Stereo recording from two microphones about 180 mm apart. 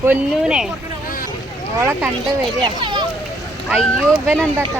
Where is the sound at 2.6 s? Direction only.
25° right (ahead or behind).